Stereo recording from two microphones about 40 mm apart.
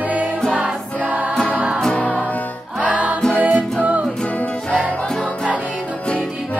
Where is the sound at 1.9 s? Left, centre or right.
Left.